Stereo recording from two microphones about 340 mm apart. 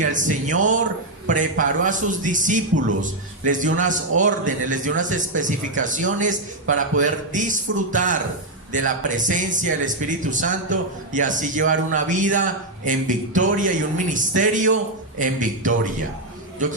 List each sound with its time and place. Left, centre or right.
0.0 s a man's voice: right
6.7 s a man's voice: right
7.0 s a man's voice: right